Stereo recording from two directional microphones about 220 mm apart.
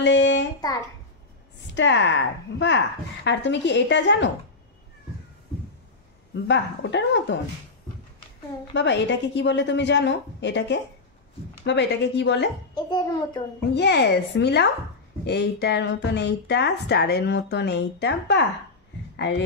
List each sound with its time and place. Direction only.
0.0 s a sound: 55° left (ahead or behind)
0.6 s a child's voice: 15° left (ahead or behind)
1.8 s speech: 55° left (ahead or behind)
6.3 s speech: 55° left (ahead or behind)
8.7 s speech: 55° left (ahead or behind)
12.7 s a child's voice: 20° left (ahead or behind)
13.7 s speech: 50° left (ahead or behind)